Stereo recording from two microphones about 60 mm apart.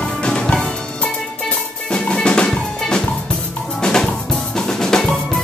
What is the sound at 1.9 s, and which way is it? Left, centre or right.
Music, centre.